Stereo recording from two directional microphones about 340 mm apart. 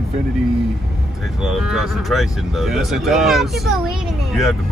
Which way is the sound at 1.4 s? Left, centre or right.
Centre.